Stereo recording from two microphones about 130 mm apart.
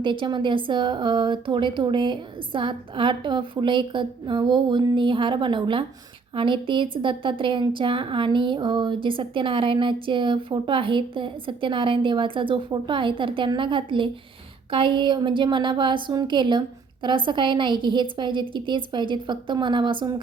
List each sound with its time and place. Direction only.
0.0 s a woman's voice: 40° right (ahead or behind)